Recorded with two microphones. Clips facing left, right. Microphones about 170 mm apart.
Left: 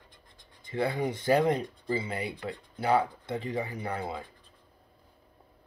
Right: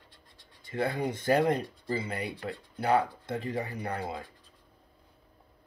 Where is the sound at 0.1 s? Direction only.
15° left (ahead or behind).